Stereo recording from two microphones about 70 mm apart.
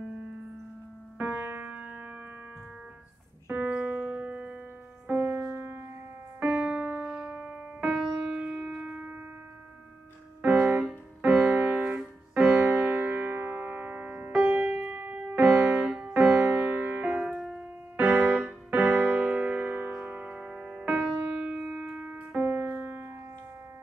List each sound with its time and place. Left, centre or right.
1.1 s music: right
3.4 s music: right
5.0 s music: right
6.4 s music: centre
10.4 s music: right
10.9 s piano: centre
12.8 s music: right
17.3 s keyboard: centre
17.9 s keyboard: right
20.0 s music: centre